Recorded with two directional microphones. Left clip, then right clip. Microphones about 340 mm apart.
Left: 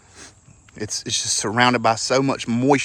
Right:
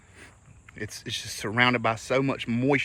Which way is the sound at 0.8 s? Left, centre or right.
Centre.